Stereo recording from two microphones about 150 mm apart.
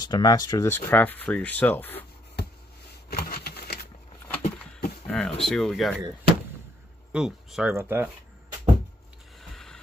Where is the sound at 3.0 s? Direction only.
90° left.